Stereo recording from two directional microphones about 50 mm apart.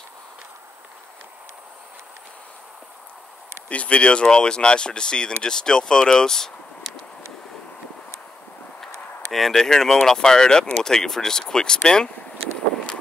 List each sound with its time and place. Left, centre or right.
3.6 s speech: left
9.3 s speech: centre